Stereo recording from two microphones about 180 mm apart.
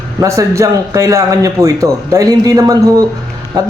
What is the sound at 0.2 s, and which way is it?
A man's voice, 15° right (ahead or behind).